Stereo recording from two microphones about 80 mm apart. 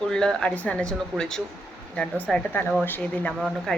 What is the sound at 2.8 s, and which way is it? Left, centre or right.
Speech, left.